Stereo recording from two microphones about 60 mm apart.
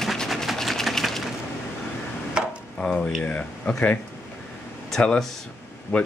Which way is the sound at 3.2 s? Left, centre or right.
Left.